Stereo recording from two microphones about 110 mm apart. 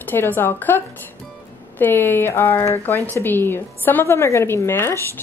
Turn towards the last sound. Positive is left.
turn(degrees=25)  # may be behind; listen again after turning